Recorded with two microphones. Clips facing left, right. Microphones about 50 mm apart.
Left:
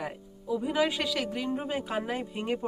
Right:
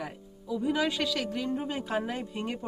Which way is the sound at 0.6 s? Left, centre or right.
Centre.